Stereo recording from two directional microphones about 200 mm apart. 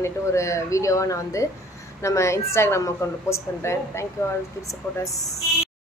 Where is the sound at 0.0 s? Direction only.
15° left (ahead or behind).